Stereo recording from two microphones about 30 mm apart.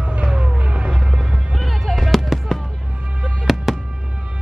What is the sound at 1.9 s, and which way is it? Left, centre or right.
Fireworks, centre.